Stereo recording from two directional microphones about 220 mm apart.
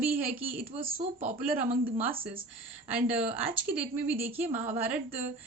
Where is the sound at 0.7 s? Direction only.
25° right (ahead or behind).